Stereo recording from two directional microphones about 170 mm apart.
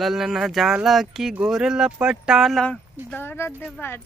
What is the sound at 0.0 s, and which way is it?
Speech, centre (ahead or behind).